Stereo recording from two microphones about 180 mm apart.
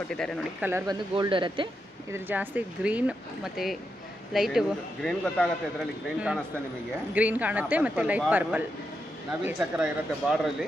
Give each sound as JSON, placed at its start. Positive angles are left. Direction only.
{"t": 0.6, "sound": "speech", "side_deg": -15}
{"t": 1.1, "sound": "speech", "side_deg": -25}
{"t": 2.1, "sound": "a man's voice", "side_deg": -10}